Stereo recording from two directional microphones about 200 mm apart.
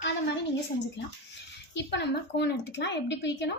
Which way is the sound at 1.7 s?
60° left (ahead or behind).